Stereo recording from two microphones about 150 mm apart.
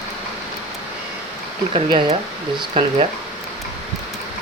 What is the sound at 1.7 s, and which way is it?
Speech, 40° right (ahead or behind).